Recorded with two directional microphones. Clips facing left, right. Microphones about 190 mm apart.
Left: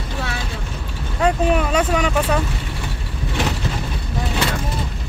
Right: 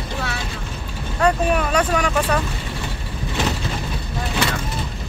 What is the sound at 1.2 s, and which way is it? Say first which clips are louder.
Speech: left 1 dB; 20° left (ahead or behind).